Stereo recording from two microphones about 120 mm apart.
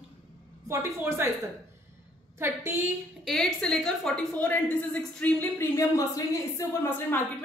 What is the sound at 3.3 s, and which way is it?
A woman's voice, 5° left (ahead or behind).